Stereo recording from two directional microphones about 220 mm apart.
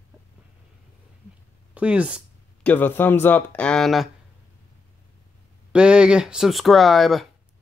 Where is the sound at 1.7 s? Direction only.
5° right (ahead or behind).